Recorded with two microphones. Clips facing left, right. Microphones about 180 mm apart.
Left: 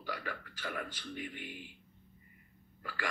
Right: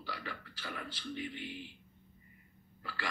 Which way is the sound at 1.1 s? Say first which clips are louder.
Right 3 dB; 45° left (ahead or behind).